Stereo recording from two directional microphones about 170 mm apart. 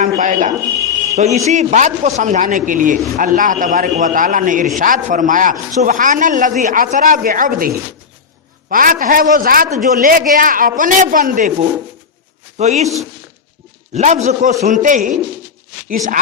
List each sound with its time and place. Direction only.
0.0 s a man's voice: 50° right (ahead or behind)
8.7 s a man's voice: 55° right (ahead or behind)
12.5 s a man's voice: 40° right (ahead or behind)
13.9 s a man's voice: 45° right (ahead or behind)